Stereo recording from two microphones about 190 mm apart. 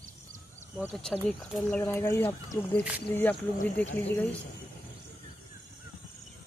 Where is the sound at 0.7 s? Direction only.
Centre (ahead or behind).